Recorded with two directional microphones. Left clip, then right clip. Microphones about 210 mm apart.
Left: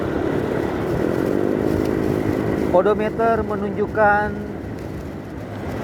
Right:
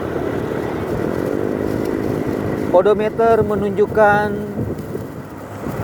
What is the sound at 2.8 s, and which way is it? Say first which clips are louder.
Speech: right 4 dB; 55° right (ahead or behind).